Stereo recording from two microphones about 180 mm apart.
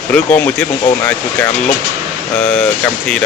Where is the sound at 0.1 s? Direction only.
10° left (ahead or behind).